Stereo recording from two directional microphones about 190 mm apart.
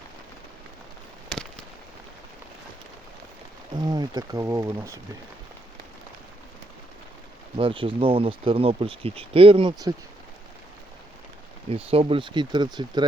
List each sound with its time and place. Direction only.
3.8 s speech: 20° right (ahead or behind)
7.5 s speech: 30° right (ahead or behind)
11.7 s speech: 30° right (ahead or behind)